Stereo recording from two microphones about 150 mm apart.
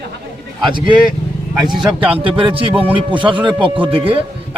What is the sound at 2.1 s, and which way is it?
Speech, 35° right (ahead or behind).